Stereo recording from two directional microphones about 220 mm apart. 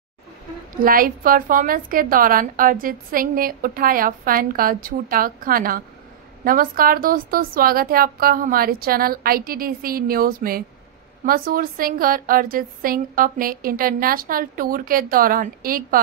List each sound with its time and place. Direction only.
0.8 s a woman's voice: 40° right (ahead or behind)